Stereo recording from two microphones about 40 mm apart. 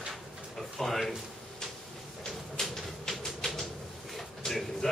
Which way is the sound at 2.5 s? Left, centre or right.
Centre.